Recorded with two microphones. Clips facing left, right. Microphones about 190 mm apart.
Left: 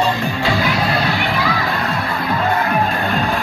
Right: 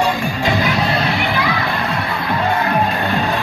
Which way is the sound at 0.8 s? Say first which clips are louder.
Even; centre (ahead or behind).